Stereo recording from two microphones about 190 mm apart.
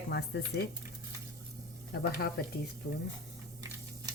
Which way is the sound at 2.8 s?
65° left (ahead or behind).